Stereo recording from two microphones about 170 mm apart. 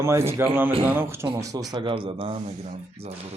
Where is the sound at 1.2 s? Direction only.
20° right (ahead or behind).